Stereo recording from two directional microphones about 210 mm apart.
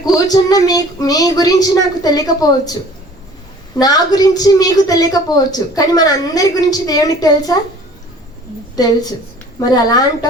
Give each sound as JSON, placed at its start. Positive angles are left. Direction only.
{"t": 0.0, "sound": "a woman's voice", "side_deg": 20}
{"t": 3.8, "sound": "a woman's voice", "side_deg": 20}
{"t": 8.7, "sound": "a woman's voice", "side_deg": 20}